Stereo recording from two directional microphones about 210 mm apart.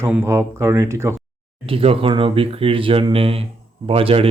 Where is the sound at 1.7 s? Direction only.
25° right (ahead or behind).